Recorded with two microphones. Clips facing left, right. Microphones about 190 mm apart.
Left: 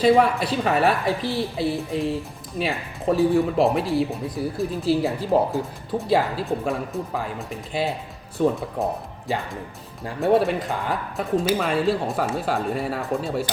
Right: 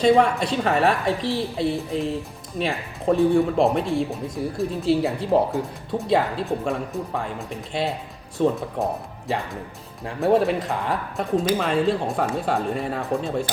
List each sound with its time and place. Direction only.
0.0 s speech: 5° left (ahead or behind)